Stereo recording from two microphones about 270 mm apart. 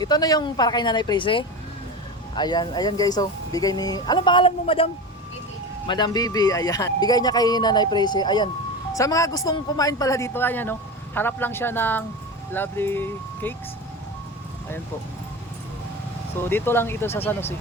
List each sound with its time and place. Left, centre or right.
0.0 s speech: centre
5.9 s speech: centre
16.4 s speech: centre